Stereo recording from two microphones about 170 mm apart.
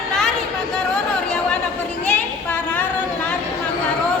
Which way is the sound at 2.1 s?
10° left (ahead or behind).